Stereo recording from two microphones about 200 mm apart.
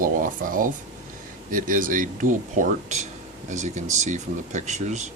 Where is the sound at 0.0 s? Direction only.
45° right (ahead or behind).